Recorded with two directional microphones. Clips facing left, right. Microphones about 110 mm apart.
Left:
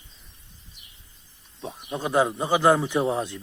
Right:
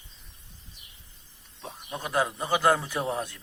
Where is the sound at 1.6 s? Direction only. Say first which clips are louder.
Left 6 dB; 20° left (ahead or behind).